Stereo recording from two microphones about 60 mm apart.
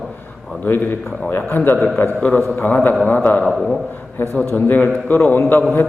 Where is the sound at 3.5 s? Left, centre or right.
Centre.